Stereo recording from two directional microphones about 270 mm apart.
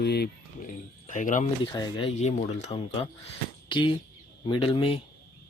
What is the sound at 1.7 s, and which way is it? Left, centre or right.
Speech, centre.